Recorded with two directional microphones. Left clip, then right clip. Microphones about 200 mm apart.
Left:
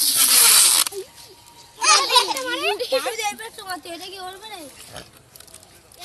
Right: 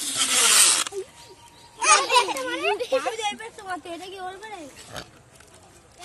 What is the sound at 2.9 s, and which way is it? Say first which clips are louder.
Speech: left 2 dB; 20° right (ahead or behind).